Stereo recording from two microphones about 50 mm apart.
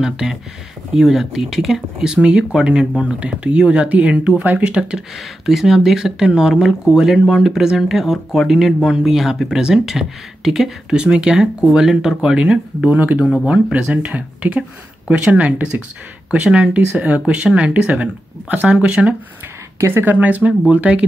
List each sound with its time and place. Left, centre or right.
0.0 s speech: centre
5.1 s speech: centre
12.9 s speech: right
13.5 s speech: centre
16.9 s speech: centre
19.8 s speech: right
20.1 s speech: right